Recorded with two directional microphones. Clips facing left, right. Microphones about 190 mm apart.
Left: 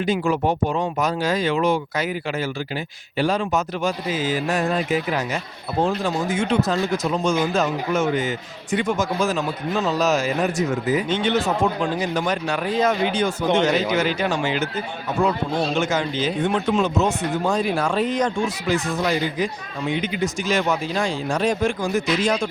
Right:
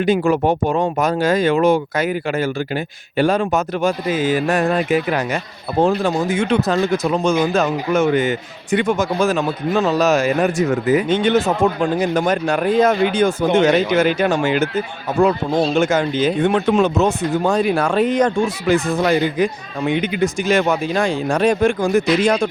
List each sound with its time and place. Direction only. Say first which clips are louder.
0.0 s speech: right 5 dB; 55° right (ahead or behind)
15.7 s speech: right 6 dB; 50° right (ahead or behind)